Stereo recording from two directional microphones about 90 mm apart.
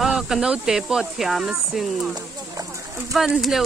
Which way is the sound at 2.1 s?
40° right (ahead or behind).